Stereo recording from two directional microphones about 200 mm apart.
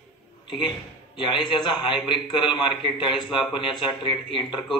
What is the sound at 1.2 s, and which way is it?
Speech, 25° left (ahead or behind).